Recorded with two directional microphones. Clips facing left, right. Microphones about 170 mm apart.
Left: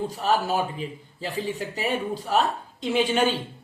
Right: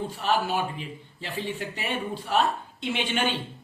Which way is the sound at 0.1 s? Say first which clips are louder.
Even; 40° left (ahead or behind).